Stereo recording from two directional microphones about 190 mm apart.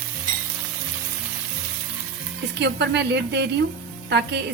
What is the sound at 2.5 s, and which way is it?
A woman's voice, 65° right (ahead or behind).